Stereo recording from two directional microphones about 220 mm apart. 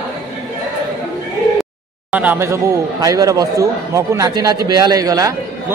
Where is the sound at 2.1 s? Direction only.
10° right (ahead or behind).